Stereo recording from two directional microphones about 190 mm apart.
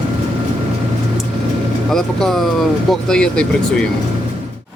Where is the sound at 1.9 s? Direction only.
Centre (ahead or behind).